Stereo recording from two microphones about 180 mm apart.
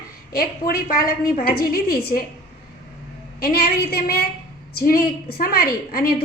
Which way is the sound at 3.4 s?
55° left (ahead or behind).